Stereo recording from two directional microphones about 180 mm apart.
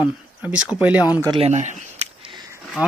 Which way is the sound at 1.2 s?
35° right (ahead or behind).